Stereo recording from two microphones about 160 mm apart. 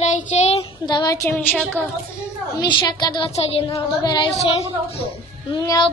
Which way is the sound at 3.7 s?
25° left (ahead or behind).